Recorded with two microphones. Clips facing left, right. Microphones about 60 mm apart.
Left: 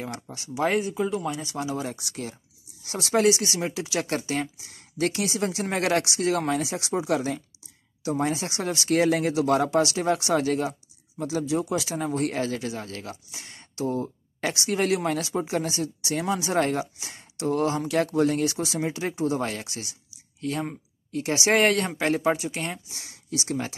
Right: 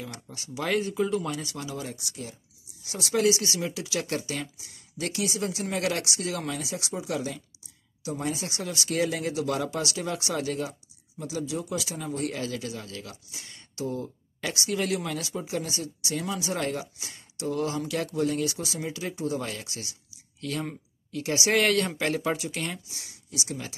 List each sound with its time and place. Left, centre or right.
0.3 s speech: left
0.7 s speech: centre
1.9 s speech: left
2.8 s speech: left
9.7 s speech: left
13.7 s a sound: left
14.7 s speech: left
20.3 s speech: left
21.1 s speech: left
22.8 s speech: left